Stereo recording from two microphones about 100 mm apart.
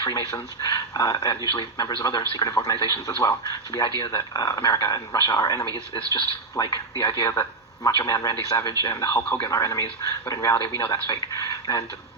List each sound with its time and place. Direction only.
0.0 s a man's voice: 35° left (ahead or behind)
7.9 s a man's voice: 40° left (ahead or behind)